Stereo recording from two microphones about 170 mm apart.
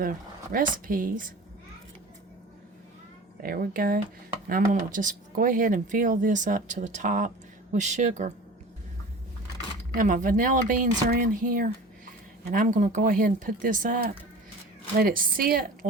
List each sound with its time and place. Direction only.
0.0 s speech: 55° right (ahead or behind)
3.4 s a woman's voice: 60° right (ahead or behind); by 8.3 s 45° right (ahead or behind)
9.9 s a woman's voice: 50° right (ahead or behind)